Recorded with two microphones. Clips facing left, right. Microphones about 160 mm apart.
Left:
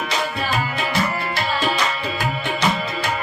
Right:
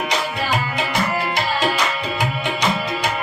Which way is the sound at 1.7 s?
15° right (ahead or behind).